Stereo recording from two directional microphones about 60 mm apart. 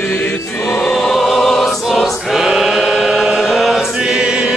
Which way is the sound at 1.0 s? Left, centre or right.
Centre.